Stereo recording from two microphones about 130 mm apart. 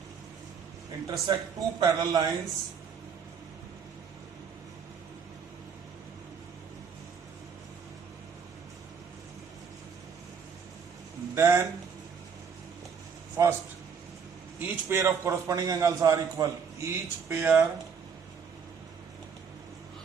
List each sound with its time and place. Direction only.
1.0 s a man's voice: 25° right (ahead or behind)
11.3 s a man's voice: 20° right (ahead or behind)
13.4 s a man's voice: 25° right (ahead or behind)
14.6 s a man's voice: 15° right (ahead or behind)